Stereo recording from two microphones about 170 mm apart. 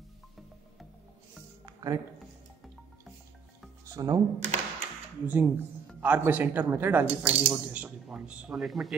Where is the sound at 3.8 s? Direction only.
20° right (ahead or behind).